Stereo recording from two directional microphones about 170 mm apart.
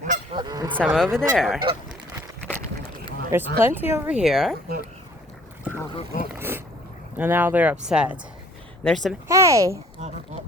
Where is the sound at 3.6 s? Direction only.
10° right (ahead or behind).